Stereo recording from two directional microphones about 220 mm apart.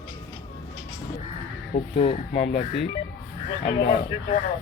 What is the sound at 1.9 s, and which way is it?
Speech, 25° left (ahead or behind).